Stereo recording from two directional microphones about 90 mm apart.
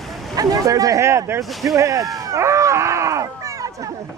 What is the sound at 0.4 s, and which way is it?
Speech, 40° right (ahead or behind).